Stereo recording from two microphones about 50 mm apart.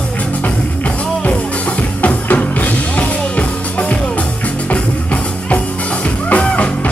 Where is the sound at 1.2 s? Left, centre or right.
Left.